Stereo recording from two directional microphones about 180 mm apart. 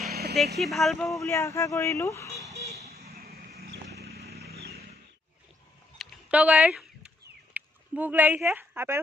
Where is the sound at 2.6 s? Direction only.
35° right (ahead or behind).